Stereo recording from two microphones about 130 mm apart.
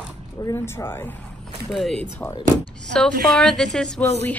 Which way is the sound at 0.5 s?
20° left (ahead or behind).